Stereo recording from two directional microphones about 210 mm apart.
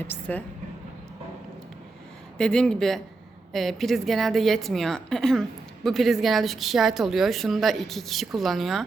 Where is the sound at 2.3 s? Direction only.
5° left (ahead or behind).